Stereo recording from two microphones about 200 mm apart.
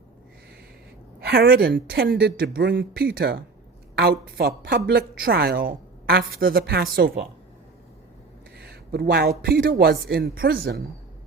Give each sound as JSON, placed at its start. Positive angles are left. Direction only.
{"t": 1.2, "sound": "a woman's voice", "side_deg": -50}
{"t": 8.5, "sound": "a woman's voice", "side_deg": -50}